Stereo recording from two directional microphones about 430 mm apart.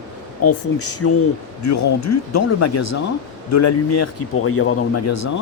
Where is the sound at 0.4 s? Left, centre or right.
Left.